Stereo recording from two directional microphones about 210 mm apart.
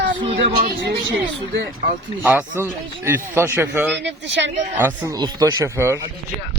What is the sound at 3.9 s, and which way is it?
Speech, 60° right (ahead or behind).